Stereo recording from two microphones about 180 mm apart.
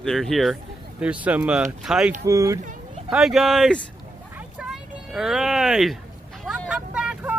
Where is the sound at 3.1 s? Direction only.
Centre (ahead or behind).